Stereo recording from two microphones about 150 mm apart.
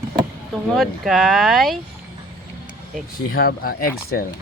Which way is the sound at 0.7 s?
Centre (ahead or behind).